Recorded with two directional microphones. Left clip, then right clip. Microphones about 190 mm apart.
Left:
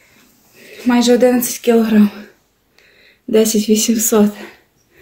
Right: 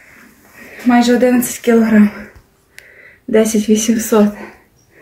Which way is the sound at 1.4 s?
40° left (ahead or behind).